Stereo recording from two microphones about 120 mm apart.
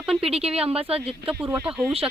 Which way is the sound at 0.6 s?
55° right (ahead or behind).